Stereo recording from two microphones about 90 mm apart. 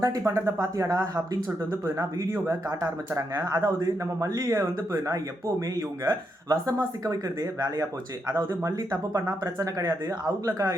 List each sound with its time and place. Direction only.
0.0 s a man's voice: 35° right (ahead or behind)
8.4 s speech: 35° right (ahead or behind)